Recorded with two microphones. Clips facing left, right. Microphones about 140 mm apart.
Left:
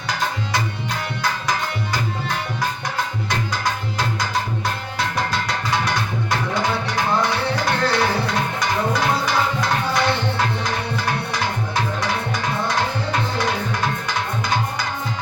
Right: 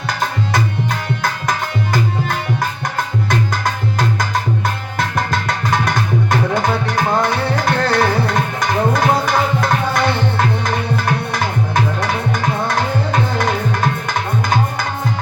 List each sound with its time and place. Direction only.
0.5 s tabla: 50° right (ahead or behind)
3.2 s tabla: 50° right (ahead or behind)